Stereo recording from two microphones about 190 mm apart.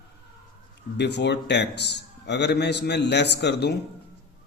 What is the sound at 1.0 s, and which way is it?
A man's voice, 65° left (ahead or behind).